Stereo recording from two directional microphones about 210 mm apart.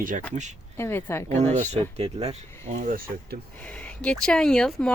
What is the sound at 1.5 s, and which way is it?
Speech, 30° right (ahead or behind).